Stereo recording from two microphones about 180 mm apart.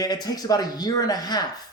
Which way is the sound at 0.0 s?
20° left (ahead or behind).